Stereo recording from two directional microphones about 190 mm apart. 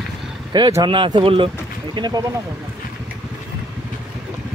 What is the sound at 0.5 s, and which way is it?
Speech, 20° right (ahead or behind).